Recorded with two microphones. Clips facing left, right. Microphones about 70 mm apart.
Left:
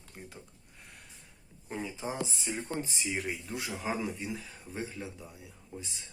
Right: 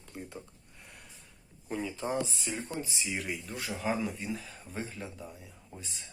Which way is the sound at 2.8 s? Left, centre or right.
Left.